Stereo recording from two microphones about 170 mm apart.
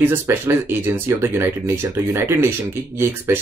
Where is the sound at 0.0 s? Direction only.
10° right (ahead or behind).